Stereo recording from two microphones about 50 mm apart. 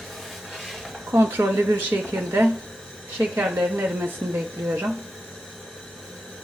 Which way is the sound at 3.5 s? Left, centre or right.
Centre.